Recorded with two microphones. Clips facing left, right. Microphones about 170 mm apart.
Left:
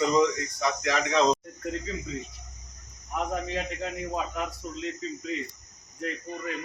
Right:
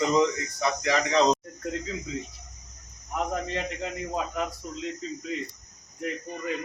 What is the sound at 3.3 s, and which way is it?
Speech, centre (ahead or behind).